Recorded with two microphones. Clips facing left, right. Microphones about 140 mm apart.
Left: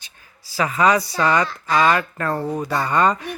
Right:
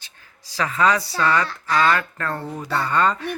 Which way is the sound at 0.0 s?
10° left (ahead or behind).